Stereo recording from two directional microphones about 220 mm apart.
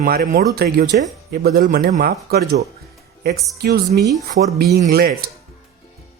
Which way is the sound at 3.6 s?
50° right (ahead or behind).